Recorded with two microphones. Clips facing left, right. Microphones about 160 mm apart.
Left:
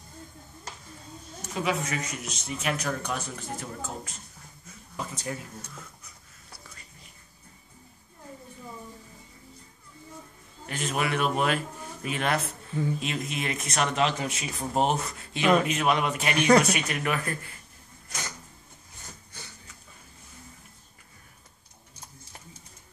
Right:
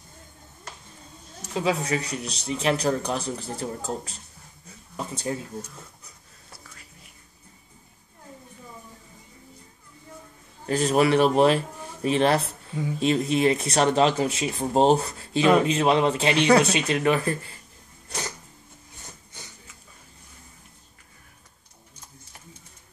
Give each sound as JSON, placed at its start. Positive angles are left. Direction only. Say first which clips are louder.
{"t": 1.5, "sound": "speech", "louder": "right 4 dB", "side_deg": -30}
{"t": 6.7, "sound": "whispering", "louder": "right 1 dB", "side_deg": -5}
{"t": 10.7, "sound": "a man's voice", "louder": "right 9 dB", "side_deg": -35}